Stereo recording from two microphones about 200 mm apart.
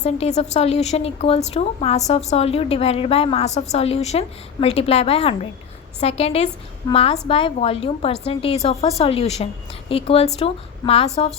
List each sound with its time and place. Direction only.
0.0 s a woman's voice: 35° left (ahead or behind)